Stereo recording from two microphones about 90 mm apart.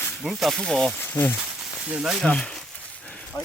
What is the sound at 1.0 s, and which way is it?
Speech, 25° left (ahead or behind).